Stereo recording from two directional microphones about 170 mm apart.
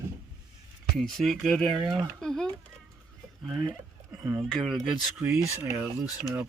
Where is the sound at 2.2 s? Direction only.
5° left (ahead or behind).